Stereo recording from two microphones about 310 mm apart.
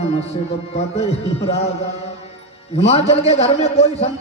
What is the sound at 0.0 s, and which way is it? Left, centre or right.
A man's voice, centre.